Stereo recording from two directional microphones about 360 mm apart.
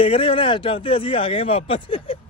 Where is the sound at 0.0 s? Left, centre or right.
Centre.